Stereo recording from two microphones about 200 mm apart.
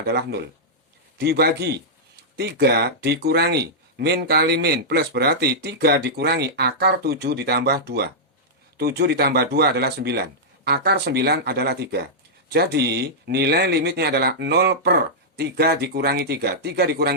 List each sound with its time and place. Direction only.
0.0 s speech: 55° right (ahead or behind)